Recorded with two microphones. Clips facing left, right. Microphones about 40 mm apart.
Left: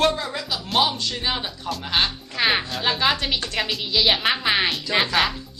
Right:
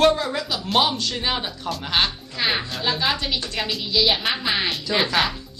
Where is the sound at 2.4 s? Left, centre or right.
Left.